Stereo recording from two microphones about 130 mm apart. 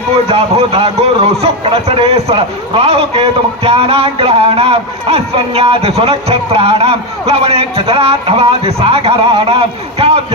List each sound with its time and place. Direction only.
0.3 s a man's voice: 55° right (ahead or behind)